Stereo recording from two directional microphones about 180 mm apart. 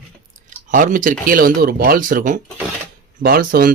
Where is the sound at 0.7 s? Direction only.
45° right (ahead or behind).